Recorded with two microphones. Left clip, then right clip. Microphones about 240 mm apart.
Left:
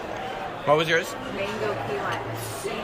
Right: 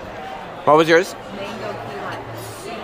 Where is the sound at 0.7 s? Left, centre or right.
Centre.